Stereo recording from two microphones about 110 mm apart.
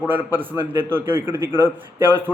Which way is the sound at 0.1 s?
20° right (ahead or behind).